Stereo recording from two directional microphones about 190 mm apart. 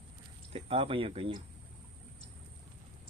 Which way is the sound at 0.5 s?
30° right (ahead or behind).